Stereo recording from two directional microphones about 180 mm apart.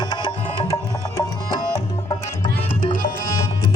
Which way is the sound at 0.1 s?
30° left (ahead or behind).